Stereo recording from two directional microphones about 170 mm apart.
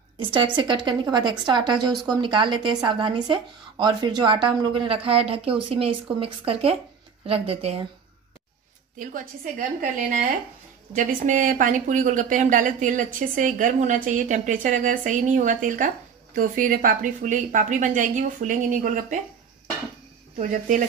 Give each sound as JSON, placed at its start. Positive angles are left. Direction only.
{"t": 0.2, "sound": "a woman's voice", "side_deg": -30}
{"t": 8.9, "sound": "speech", "side_deg": -50}
{"t": 20.3, "sound": "speech", "side_deg": -50}